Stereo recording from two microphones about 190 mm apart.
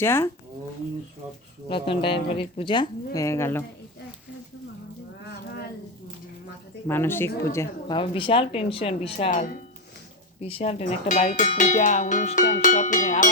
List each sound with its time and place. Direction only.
0.0 s speech: 10° left (ahead or behind)
1.7 s speech: 25° left (ahead or behind)
6.8 s speech: 10° left (ahead or behind)
7.9 s speech: 25° left (ahead or behind)
10.4 s speech: 30° left (ahead or behind)